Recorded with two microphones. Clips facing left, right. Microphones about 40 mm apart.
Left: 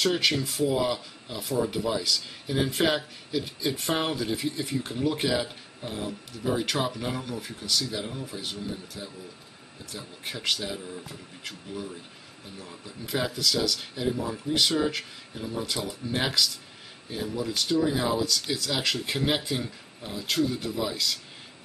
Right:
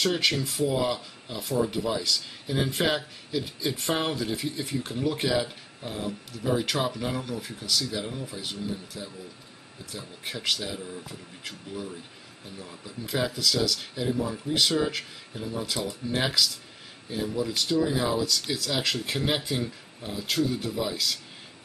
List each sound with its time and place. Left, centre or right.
0.0 s speech: centre